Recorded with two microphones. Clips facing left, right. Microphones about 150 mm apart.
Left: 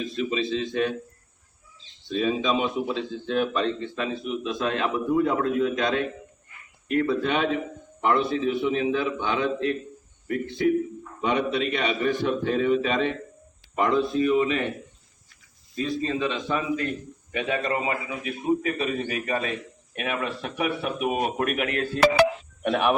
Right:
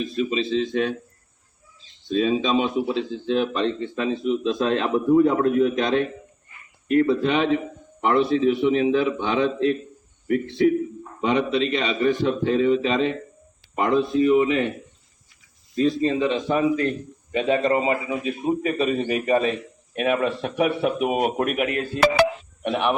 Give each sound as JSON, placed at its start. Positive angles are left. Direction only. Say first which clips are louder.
{"t": 0.2, "sound": "a man's voice", "louder": "right 4 dB", "side_deg": -25}
{"t": 2.0, "sound": "a man's voice", "louder": "right 3 dB", "side_deg": -30}
{"t": 11.2, "sound": "a man's voice", "louder": "right 3 dB", "side_deg": -25}
{"t": 15.7, "sound": "a man's voice", "louder": "right 7 dB", "side_deg": -30}